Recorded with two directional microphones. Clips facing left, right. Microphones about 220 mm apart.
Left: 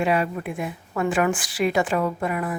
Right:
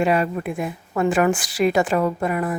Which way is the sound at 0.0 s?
45° right (ahead or behind).